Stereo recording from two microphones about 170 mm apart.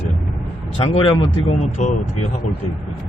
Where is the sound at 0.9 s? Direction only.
35° left (ahead or behind).